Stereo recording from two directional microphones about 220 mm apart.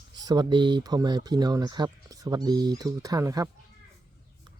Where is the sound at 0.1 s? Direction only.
20° right (ahead or behind).